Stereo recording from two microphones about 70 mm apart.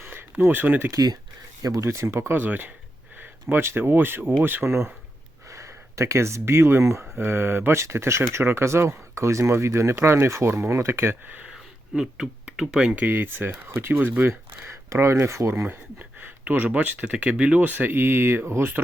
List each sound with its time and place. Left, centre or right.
0.0 s a sound: right
0.9 s speech: right
1.8 s speech: right
5.5 s speech: right
7.2 s speech: right
11.4 s a sound: centre
13.0 s speech: right
15.6 s speech: right